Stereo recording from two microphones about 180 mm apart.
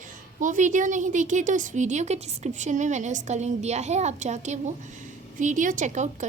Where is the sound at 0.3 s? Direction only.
45° right (ahead or behind).